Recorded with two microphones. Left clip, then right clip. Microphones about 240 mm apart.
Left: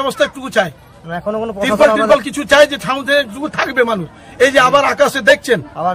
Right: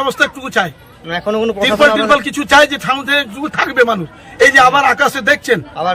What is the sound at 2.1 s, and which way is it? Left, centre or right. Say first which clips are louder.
A man's voice: right 1 dB; centre.